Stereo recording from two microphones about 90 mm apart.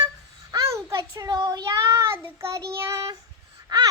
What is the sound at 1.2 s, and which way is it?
Child singing, 50° right (ahead or behind).